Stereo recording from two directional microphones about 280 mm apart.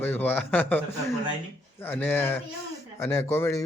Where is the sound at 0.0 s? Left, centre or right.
Centre.